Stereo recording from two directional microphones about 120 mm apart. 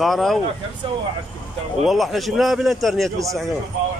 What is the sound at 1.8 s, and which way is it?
Speech, centre (ahead or behind).